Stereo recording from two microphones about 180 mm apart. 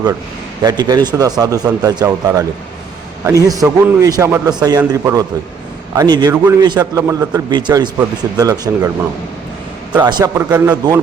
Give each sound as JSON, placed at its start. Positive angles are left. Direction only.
{"t": 0.6, "sound": "speech", "side_deg": -20}
{"t": 10.0, "sound": "speech", "side_deg": -25}
{"t": 10.3, "sound": "speech", "side_deg": -15}